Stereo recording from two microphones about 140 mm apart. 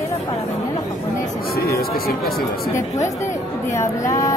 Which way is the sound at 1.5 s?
90° left.